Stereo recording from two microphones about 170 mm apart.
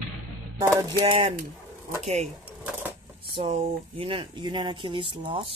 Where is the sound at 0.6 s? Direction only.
15° right (ahead or behind).